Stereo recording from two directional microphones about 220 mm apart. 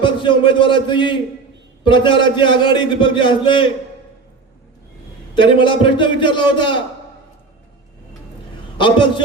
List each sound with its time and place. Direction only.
0.0 s a man's voice: 20° left (ahead or behind)
5.3 s a man's voice: 20° left (ahead or behind)
8.8 s a man's voice: 20° left (ahead or behind)